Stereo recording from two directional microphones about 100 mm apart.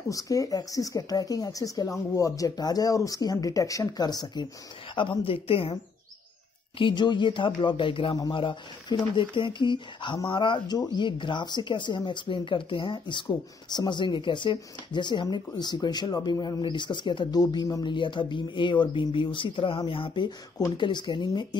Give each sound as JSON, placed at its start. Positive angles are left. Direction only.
{"t": 0.1, "sound": "speech", "side_deg": 35}
{"t": 4.9, "sound": "speech", "side_deg": 55}
{"t": 6.8, "sound": "speech", "side_deg": 50}
{"t": 17.8, "sound": "speech", "side_deg": 55}